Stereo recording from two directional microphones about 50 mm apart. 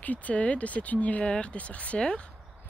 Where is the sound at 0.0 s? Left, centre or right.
Left.